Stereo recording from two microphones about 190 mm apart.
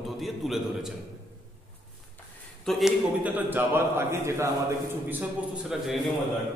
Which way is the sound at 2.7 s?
Centre (ahead or behind).